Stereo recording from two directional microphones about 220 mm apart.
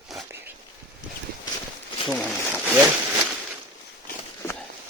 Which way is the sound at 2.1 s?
5° left (ahead or behind).